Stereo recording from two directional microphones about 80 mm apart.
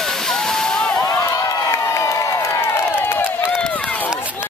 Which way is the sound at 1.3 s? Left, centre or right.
Left.